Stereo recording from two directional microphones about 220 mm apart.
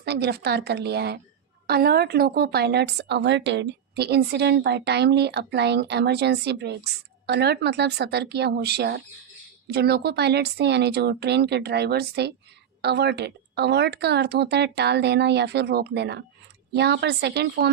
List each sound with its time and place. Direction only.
0.0 s a woman's voice: 50° right (ahead or behind)